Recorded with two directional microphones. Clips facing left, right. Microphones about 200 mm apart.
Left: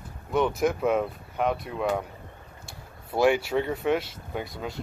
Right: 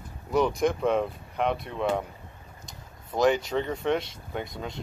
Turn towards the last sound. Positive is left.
turn(degrees=5)  # may be behind; listen again after turning